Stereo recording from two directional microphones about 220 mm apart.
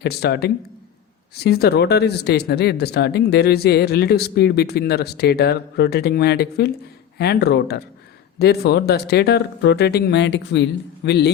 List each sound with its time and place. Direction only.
0.0 s speech: 45° left (ahead or behind)